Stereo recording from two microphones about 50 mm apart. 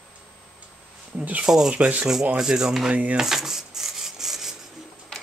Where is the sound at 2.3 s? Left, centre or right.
Centre.